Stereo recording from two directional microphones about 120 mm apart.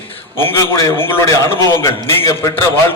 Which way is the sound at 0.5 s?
25° left (ahead or behind).